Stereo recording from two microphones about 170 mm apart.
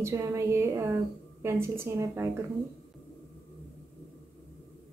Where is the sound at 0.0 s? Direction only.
15° right (ahead or behind).